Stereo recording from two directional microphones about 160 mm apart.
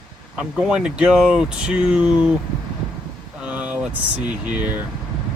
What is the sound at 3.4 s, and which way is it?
Speech, 10° right (ahead or behind).